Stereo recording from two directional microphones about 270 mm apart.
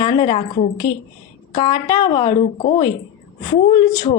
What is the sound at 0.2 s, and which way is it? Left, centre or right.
A woman's voice, centre.